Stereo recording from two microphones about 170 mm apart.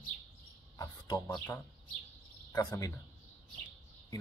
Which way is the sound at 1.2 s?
10° left (ahead or behind).